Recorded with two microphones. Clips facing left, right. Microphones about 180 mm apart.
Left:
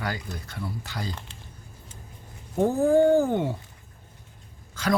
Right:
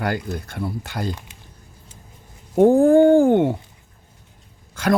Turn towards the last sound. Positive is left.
turn(degrees=-55)  # may be behind; listen again after turning